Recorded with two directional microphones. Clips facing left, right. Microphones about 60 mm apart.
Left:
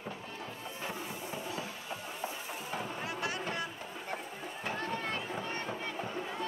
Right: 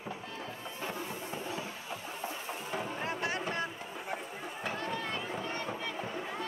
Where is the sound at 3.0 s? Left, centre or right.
Right.